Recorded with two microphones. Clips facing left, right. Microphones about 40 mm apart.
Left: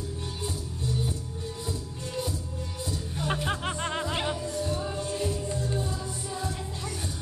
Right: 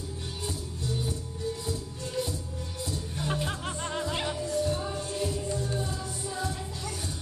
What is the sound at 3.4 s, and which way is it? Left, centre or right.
Music, left.